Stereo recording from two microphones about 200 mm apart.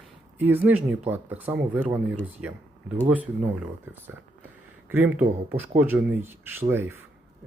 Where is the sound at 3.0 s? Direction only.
5° right (ahead or behind).